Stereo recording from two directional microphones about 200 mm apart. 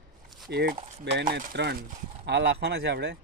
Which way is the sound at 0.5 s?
55° right (ahead or behind).